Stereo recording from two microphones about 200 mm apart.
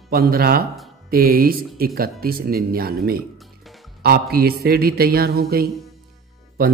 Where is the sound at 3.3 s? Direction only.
Centre (ahead or behind).